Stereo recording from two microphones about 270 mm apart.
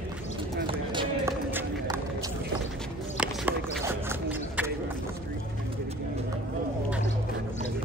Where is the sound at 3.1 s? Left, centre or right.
Centre.